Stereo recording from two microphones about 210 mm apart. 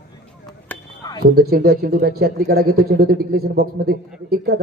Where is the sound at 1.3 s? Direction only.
50° right (ahead or behind).